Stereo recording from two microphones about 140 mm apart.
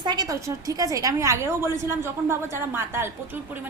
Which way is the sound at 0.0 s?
30° right (ahead or behind).